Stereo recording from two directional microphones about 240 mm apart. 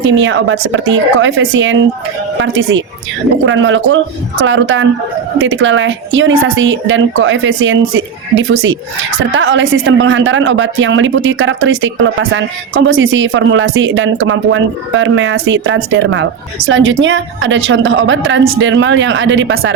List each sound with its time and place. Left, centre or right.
0.0 s speech: right